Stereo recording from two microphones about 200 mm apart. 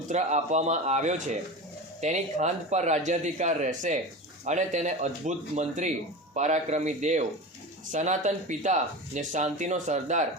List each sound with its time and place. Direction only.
0.1 s speech: 35° right (ahead or behind)